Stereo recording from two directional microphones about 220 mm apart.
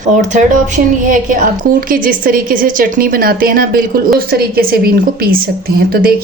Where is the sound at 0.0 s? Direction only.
35° right (ahead or behind).